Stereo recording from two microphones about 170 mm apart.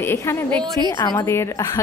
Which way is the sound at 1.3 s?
15° left (ahead or behind).